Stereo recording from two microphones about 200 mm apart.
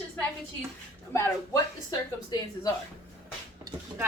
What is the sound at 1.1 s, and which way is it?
Speech, 15° left (ahead or behind).